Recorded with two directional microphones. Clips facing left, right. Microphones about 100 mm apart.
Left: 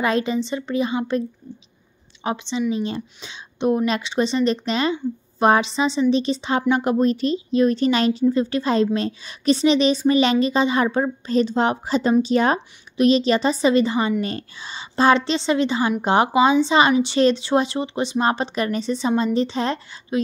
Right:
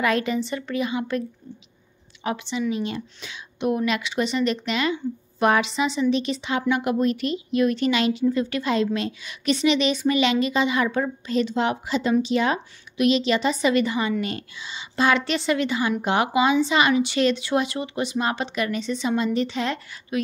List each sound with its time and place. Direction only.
0.0 s a woman's voice: 25° left (ahead or behind)
2.2 s a woman's voice: 25° left (ahead or behind)